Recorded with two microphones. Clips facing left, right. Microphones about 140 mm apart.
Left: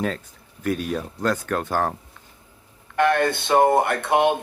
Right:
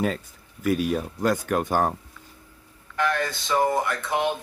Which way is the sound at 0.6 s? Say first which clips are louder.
Right 2 dB; 5° right (ahead or behind).